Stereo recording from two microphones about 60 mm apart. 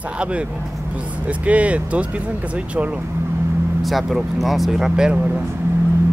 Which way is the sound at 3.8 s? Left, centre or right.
Centre.